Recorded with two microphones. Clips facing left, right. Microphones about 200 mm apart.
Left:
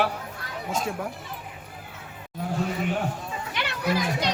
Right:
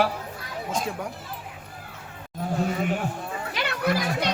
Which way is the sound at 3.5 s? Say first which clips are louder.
Right 2 dB; 60° right (ahead or behind).